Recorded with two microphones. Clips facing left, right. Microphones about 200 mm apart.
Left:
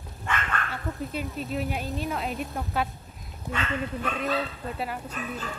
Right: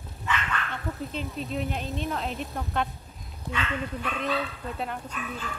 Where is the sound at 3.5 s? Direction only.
45° left (ahead or behind).